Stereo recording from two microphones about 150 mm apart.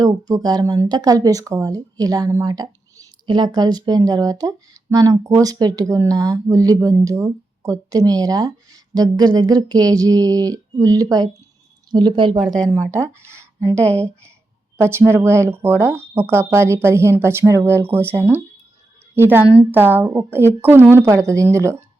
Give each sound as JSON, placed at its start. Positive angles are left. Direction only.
{"t": 0.0, "sound": "speech", "side_deg": -25}
{"t": 12.4, "sound": "speech", "side_deg": 0}
{"t": 12.9, "sound": "speech", "side_deg": -20}
{"t": 13.7, "sound": "speech", "side_deg": 10}
{"t": 14.8, "sound": "a woman's voice", "side_deg": -15}